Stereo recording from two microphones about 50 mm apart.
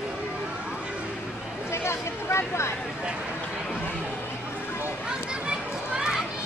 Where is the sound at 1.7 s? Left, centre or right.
Left.